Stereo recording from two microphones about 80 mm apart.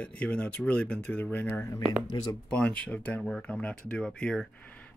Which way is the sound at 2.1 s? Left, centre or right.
Left.